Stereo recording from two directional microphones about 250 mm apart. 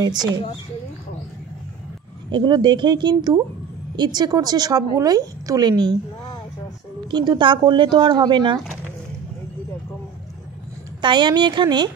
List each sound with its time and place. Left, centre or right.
2.3 s a woman's voice: centre
7.1 s a woman's voice: centre
11.0 s a woman's voice: centre